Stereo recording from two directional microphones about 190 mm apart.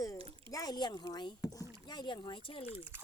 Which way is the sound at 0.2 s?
30° right (ahead or behind).